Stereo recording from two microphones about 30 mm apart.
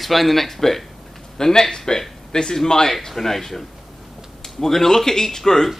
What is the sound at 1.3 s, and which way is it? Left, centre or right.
Speech, centre.